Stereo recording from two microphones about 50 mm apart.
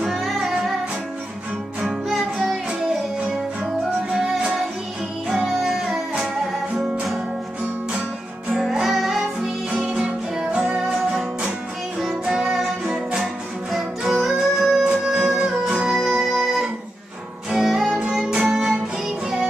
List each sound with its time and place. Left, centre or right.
0.0 s music: centre
1.9 s music: centre
5.5 s music: centre
8.5 s music: centre
9.7 s music: centre
12.0 s music: centre
13.7 s music: centre
15.9 s music: centre